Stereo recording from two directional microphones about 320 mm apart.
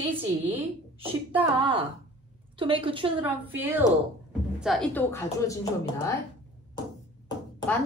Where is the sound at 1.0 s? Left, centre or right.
Centre.